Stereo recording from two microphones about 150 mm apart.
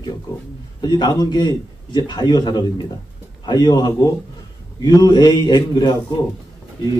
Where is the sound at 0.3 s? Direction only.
30° left (ahead or behind).